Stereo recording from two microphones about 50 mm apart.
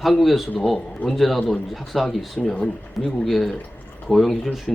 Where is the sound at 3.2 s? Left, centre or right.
Centre.